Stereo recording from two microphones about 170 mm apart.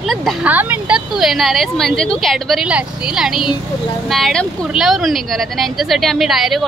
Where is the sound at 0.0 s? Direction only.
Centre (ahead or behind).